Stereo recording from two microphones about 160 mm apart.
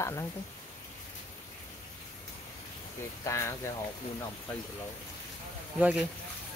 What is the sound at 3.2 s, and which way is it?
Speech, 15° left (ahead or behind).